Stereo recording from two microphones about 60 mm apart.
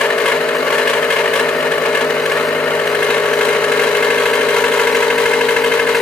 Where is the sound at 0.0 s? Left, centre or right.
Centre.